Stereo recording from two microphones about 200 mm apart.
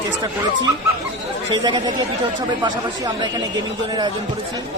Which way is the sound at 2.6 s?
20° right (ahead or behind).